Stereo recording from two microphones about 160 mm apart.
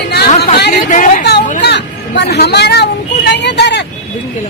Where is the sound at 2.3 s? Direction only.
90° left.